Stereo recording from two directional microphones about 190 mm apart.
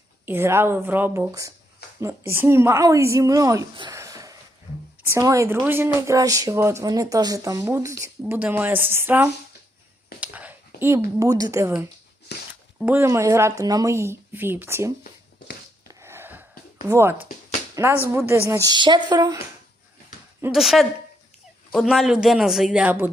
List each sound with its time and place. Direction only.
0.3 s speech: 10° right (ahead or behind)
10.2 s a sound: 10° right (ahead or behind)
10.8 s speech: 15° right (ahead or behind)
12.3 s a sound: 60° left (ahead or behind)
12.8 s speech: 10° right (ahead or behind)
15.9 s a sound: 15° right (ahead or behind)
16.9 s speech: 15° right (ahead or behind)
18.3 s speech: 15° right (ahead or behind)
20.5 s speech: centre (ahead or behind)